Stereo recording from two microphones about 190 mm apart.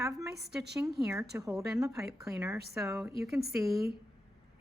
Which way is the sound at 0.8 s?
5° right (ahead or behind).